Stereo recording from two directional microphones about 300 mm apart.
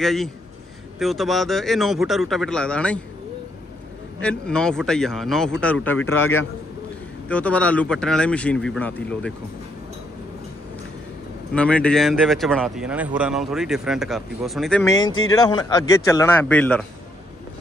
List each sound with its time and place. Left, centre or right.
0.0 s speech: centre
4.2 s speech: centre
6.0 s a man's voice: left
7.2 s speech: centre
11.5 s speech: centre